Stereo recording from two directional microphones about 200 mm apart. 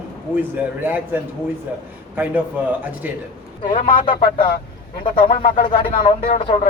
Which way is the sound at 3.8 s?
25° left (ahead or behind).